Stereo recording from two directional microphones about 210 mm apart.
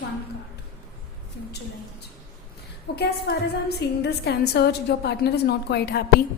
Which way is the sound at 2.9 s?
50° left (ahead or behind).